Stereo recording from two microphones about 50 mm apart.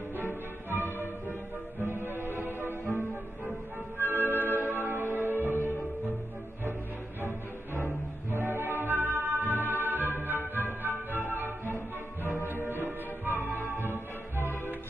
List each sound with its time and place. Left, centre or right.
0.2 s music: left
1.8 s music: right
2.8 s music: left
4.0 s music: right
7.7 s music: right
11.4 s music: left
13.4 s music: left